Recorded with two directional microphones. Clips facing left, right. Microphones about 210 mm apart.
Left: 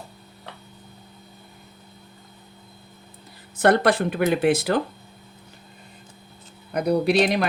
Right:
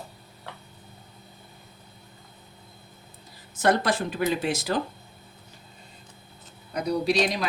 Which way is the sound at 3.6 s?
60° left (ahead or behind).